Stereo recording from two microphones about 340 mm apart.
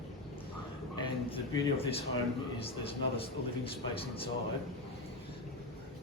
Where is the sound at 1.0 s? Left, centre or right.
Centre.